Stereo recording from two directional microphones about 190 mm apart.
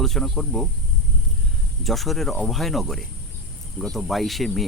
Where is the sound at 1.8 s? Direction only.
Centre (ahead or behind).